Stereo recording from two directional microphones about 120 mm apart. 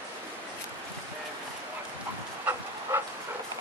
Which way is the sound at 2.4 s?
20° right (ahead or behind).